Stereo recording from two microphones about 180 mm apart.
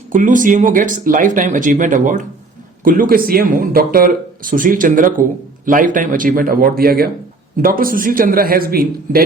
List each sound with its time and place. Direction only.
0.1 s speech: 45° right (ahead or behind)